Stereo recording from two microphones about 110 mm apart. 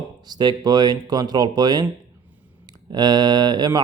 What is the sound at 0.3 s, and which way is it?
Mantra, 40° right (ahead or behind).